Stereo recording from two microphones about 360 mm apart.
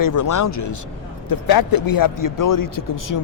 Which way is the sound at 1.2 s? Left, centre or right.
Left.